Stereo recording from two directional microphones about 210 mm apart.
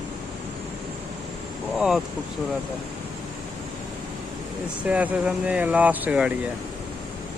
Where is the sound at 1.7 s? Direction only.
Centre (ahead or behind).